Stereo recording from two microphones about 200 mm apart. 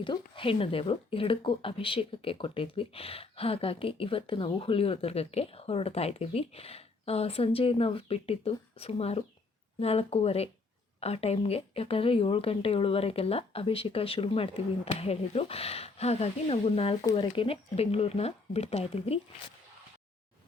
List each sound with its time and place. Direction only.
0.0 s speech: 25° left (ahead or behind)